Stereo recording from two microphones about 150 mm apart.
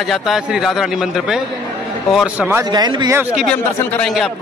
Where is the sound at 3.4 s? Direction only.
5° left (ahead or behind).